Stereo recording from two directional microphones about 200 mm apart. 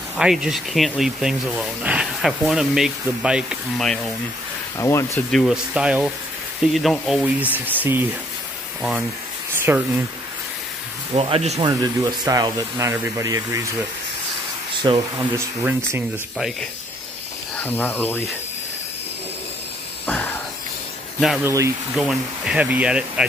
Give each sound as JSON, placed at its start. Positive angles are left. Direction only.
{"t": 0.2, "sound": "speech", "side_deg": -5}
{"t": 4.7, "sound": "speech", "side_deg": 15}
{"t": 5.3, "sound": "speech", "side_deg": 0}
{"t": 9.6, "sound": "speech", "side_deg": -10}
{"t": 11.1, "sound": "speech", "side_deg": -30}
{"t": 11.6, "sound": "speech", "side_deg": -20}
{"t": 14.8, "sound": "speech", "side_deg": -20}
{"t": 16.3, "sound": "speech", "side_deg": 0}
{"t": 17.6, "sound": "speech", "side_deg": 10}
{"t": 20.1, "sound": "a sound", "side_deg": 10}
{"t": 21.5, "sound": "speech", "side_deg": -15}
{"t": 21.9, "sound": "speech", "side_deg": 0}